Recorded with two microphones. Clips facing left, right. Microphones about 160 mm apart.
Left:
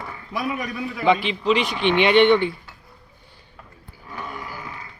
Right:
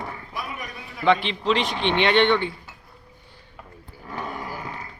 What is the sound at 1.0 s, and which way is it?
A man's voice, 5° left (ahead or behind).